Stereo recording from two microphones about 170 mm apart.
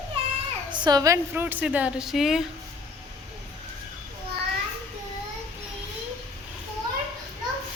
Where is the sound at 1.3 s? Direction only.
10° right (ahead or behind).